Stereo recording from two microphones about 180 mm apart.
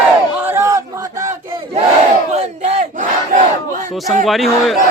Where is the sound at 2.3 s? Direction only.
40° right (ahead or behind).